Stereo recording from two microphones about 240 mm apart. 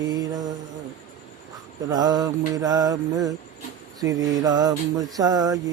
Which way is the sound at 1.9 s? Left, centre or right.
Centre.